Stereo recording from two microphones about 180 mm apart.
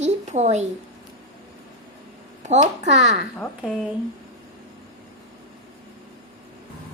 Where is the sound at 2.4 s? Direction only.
40° right (ahead or behind).